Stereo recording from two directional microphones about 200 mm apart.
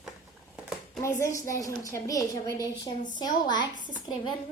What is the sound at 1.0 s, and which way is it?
A woman's voice, 15° left (ahead or behind).